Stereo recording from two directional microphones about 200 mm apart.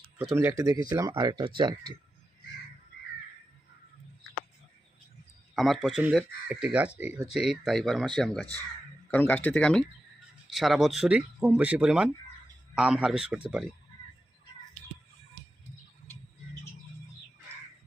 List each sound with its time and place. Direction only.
0.2 s speech: 10° right (ahead or behind)
5.5 s speech: centre (ahead or behind)